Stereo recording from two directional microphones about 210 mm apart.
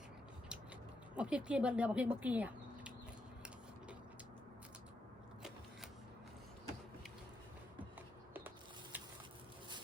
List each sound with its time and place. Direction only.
1.1 s speech: 5° right (ahead or behind)
8.3 s mechanisms: 10° right (ahead or behind)